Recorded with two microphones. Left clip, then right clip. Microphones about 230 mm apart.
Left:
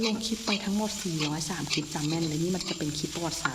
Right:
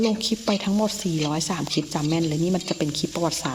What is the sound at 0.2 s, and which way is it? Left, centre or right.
Speech, right.